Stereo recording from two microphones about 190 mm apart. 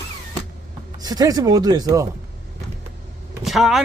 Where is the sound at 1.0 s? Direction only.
20° right (ahead or behind).